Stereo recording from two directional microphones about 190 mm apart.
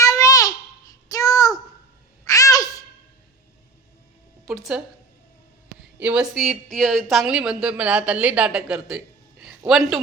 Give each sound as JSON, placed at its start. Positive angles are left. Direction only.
{"t": 0.0, "sound": "babbling", "side_deg": 20}
{"t": 1.1, "sound": "child singing", "side_deg": 20}
{"t": 2.2, "sound": "babbling", "side_deg": 20}
{"t": 4.4, "sound": "speech", "side_deg": 0}
{"t": 6.0, "sound": "speech", "side_deg": -5}
{"t": 9.4, "sound": "a sound", "side_deg": -5}